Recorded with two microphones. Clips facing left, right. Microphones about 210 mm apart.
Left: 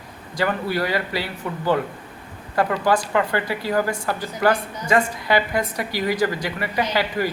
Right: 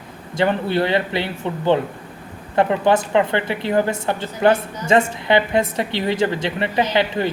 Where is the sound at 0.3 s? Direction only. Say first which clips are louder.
Right 4 dB; 25° right (ahead or behind).